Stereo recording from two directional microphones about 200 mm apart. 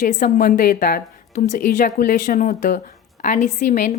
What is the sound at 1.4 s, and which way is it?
Speech, 35° left (ahead or behind).